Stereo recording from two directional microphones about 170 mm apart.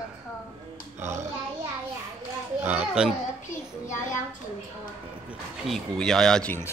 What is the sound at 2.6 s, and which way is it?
Speech, 10° right (ahead or behind).